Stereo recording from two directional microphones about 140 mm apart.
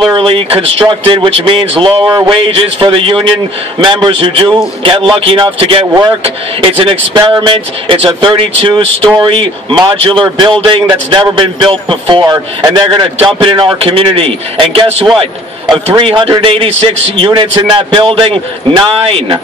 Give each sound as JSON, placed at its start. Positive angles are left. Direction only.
{"t": 0.1, "sound": "speech", "side_deg": -40}